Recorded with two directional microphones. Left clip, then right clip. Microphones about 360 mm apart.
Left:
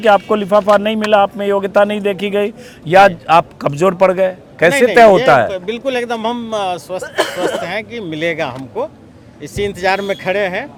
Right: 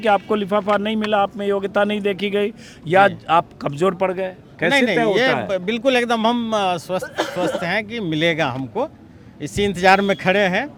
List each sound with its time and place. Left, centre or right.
0.0 s a man's voice: centre
4.7 s speech: right